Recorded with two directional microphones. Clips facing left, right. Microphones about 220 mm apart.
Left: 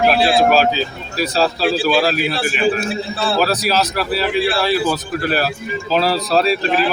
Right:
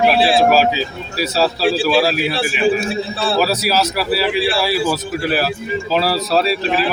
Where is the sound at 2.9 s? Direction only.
30° right (ahead or behind).